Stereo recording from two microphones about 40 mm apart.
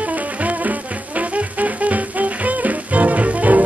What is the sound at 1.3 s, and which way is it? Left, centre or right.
Music, right.